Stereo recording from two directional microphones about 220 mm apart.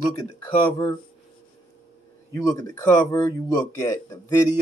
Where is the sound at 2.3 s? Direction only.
15° left (ahead or behind).